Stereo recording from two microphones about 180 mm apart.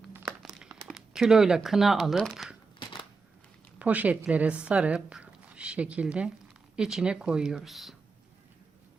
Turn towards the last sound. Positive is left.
turn(degrees=0)  # may be behind; listen again after turning